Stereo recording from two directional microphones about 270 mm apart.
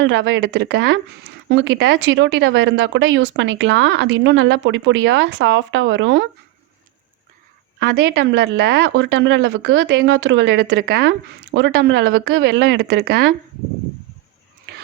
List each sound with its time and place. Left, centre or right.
0.0 s speech: right
8.1 s speech: right